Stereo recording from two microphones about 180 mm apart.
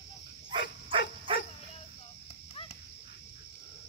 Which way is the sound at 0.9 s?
30° right (ahead or behind).